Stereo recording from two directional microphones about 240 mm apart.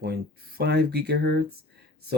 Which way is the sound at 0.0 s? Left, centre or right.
Right.